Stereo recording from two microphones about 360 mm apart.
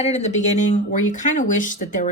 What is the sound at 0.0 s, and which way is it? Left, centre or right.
Speech, centre.